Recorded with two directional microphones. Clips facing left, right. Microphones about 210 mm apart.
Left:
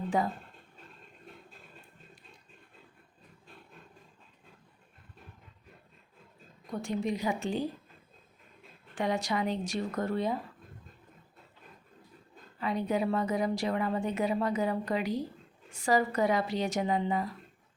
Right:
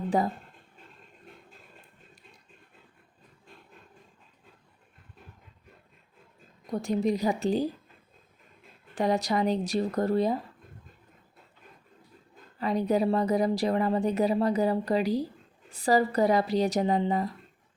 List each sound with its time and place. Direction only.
0.1 s speech: 35° right (ahead or behind)
6.8 s speech: 35° right (ahead or behind)
9.0 s speech: 35° right (ahead or behind)
12.5 s speech: 40° right (ahead or behind)